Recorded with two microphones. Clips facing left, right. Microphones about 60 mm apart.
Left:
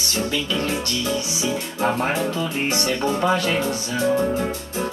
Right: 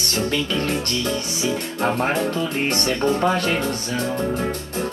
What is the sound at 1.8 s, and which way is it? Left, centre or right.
Speech, right.